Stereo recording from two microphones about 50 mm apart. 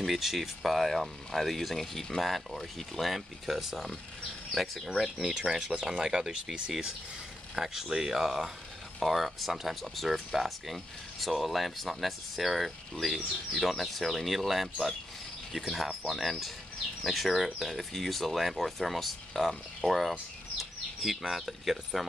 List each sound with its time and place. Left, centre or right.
0.0 s speech: centre